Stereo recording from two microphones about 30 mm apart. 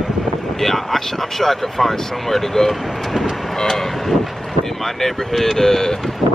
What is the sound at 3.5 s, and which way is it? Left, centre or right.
Speech, centre.